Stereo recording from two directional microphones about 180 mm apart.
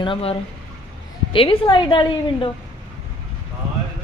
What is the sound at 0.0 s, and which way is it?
A woman's voice, 30° left (ahead or behind).